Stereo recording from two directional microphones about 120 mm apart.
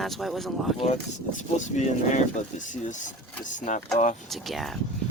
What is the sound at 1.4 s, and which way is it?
Speech, 85° left.